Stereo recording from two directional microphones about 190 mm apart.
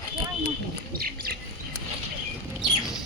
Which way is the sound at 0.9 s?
50° right (ahead or behind).